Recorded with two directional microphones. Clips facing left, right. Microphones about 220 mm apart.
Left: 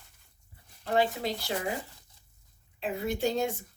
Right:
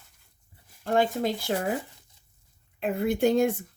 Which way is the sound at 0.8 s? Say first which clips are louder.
Right 3 dB; 50° right (ahead or behind).